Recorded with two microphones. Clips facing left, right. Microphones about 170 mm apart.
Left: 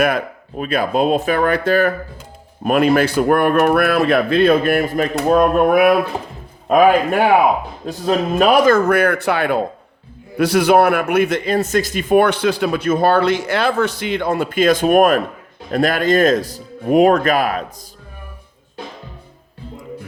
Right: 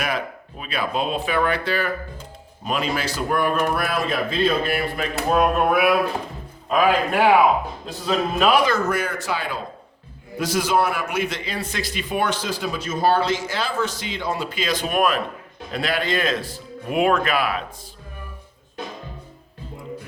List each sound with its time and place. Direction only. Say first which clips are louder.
0.0 s a man's voice: left 9 dB; 50° left (ahead or behind)